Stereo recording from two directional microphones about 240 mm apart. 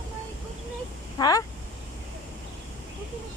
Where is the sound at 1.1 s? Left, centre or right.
Centre.